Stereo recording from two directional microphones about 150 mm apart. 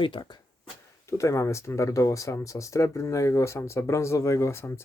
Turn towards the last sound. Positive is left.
turn(degrees=15)  # may be behind; listen again after turning